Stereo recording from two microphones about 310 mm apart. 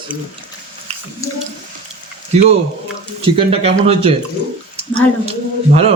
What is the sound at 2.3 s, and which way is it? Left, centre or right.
A man's voice, right.